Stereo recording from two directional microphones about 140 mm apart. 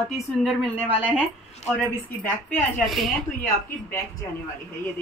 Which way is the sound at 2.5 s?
Centre (ahead or behind).